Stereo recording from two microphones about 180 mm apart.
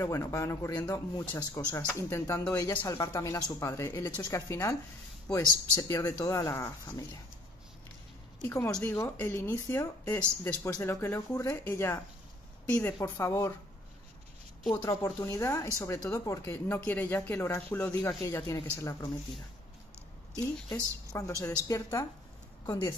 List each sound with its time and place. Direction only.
0.0 s speech: 15° left (ahead or behind)
8.4 s speech: 20° left (ahead or behind)
14.8 s speech: 20° left (ahead or behind)
20.7 s speech: 20° left (ahead or behind)